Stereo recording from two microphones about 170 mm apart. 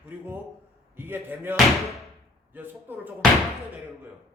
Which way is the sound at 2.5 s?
10° right (ahead or behind).